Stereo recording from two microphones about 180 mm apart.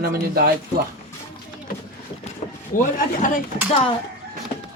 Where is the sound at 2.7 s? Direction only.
50° left (ahead or behind).